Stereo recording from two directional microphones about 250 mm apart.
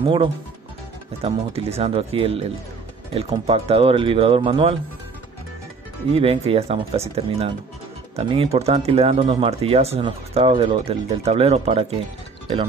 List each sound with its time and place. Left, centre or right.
1.2 s speech: right
6.1 s speech: right